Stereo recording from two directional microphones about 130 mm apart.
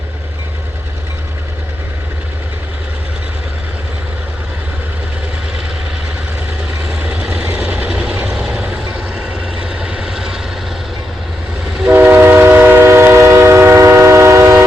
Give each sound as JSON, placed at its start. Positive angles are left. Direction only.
{"t": 7.0, "sound": "vehicle", "side_deg": -10}
{"t": 11.8, "sound": "train", "side_deg": -10}